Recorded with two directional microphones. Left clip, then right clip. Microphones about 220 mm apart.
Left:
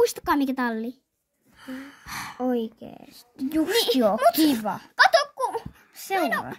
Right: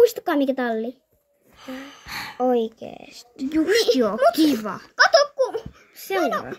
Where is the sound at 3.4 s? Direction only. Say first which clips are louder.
Right 4 dB; 35° left (ahead or behind).